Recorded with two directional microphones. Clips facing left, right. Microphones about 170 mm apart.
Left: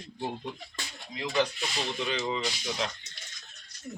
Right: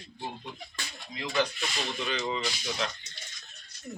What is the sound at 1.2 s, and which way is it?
Speech, 20° left (ahead or behind).